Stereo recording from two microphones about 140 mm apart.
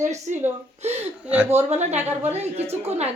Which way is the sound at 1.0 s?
10° right (ahead or behind).